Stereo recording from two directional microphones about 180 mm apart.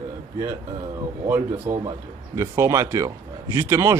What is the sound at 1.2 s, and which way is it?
A man's voice, 10° right (ahead or behind).